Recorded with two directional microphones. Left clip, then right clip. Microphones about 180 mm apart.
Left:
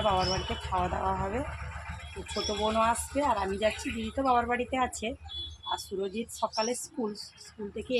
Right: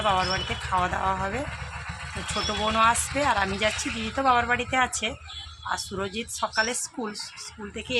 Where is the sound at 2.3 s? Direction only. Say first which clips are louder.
Right 4 dB; 35° right (ahead or behind).